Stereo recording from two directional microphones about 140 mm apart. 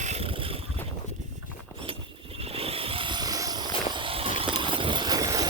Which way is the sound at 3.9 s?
40° right (ahead or behind).